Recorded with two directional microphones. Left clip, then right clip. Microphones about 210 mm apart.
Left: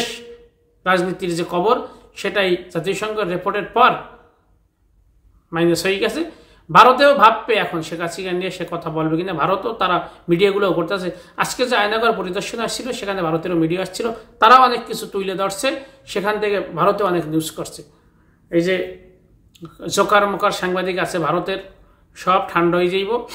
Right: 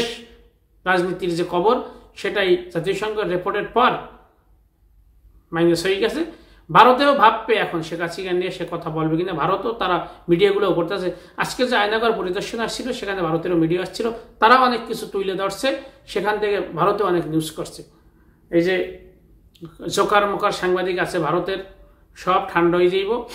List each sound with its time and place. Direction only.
0.8 s speech: 15° left (ahead or behind)
5.5 s speech: 15° left (ahead or behind)
19.8 s speech: 15° left (ahead or behind)